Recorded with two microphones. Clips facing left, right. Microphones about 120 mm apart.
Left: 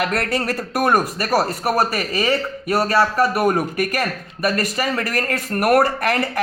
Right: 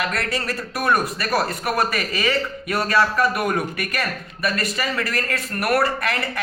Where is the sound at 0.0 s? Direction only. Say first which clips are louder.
Left 4 dB; 50° left (ahead or behind).